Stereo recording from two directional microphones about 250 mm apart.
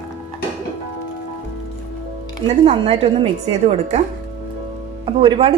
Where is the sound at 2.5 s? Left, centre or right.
Right.